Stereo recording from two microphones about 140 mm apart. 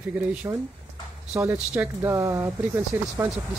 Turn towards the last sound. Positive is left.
turn(degrees=-20)  # may be behind; listen again after turning